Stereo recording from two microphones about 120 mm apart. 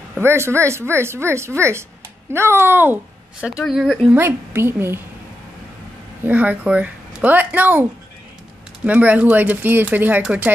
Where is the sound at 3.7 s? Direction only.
Centre (ahead or behind).